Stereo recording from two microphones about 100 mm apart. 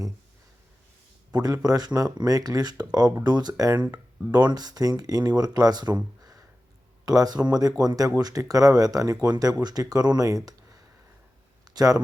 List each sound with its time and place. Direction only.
1.3 s speech: 40° right (ahead or behind)